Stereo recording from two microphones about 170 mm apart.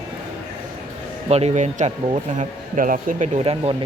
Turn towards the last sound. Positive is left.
turn(degrees=-35)  # may be behind; listen again after turning